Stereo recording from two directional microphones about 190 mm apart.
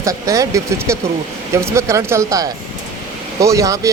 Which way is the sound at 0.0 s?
15° right (ahead or behind).